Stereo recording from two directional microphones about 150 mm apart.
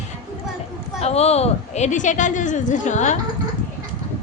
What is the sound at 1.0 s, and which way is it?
A woman's voice, 45° left (ahead or behind).